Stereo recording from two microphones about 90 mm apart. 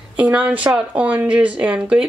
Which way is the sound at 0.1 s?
15° right (ahead or behind).